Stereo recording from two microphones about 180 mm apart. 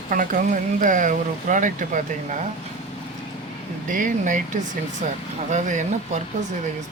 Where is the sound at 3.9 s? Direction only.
45° right (ahead or behind).